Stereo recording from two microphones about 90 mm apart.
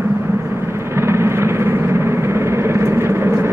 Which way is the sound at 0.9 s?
30° right (ahead or behind).